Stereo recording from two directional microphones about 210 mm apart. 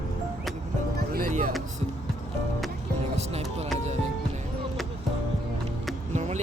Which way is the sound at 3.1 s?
30° right (ahead or behind).